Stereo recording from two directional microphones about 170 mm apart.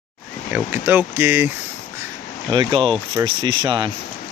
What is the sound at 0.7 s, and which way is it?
Speech, 10° right (ahead or behind).